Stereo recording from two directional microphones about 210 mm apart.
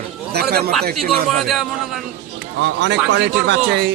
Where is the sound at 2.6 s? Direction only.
60° right (ahead or behind).